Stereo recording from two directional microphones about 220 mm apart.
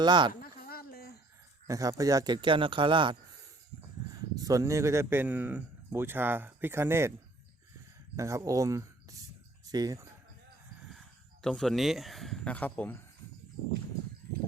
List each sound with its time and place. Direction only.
0.0 s speech: 20° right (ahead or behind)
0.7 s a sound: 45° left (ahead or behind)
1.6 s speech: 15° right (ahead or behind)
8.1 s speech: 15° right (ahead or behind)
11.4 s speech: centre (ahead or behind)